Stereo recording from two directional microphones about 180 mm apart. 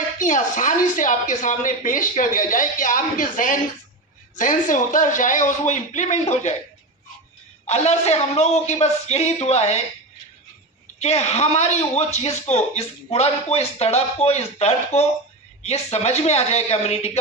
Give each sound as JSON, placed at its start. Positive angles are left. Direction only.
{"t": 0.2, "sound": "speech", "side_deg": 45}
{"t": 7.7, "sound": "a man's voice", "side_deg": 35}
{"t": 11.0, "sound": "a man's voice", "side_deg": 35}